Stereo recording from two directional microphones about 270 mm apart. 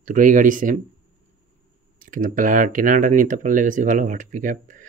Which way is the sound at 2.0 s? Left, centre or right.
Right.